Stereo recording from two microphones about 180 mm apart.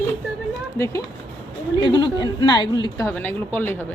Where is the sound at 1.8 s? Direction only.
25° left (ahead or behind).